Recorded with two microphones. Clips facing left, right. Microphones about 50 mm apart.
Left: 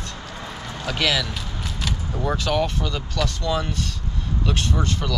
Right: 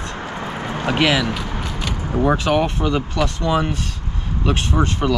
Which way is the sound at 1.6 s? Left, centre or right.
Centre.